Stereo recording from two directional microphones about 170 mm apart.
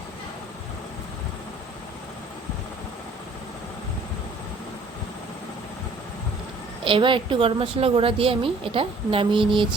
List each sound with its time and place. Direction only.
6.8 s a woman's voice: 30° right (ahead or behind)